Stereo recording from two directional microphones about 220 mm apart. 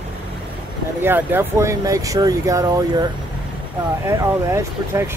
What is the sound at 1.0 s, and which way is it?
Speech, 10° right (ahead or behind).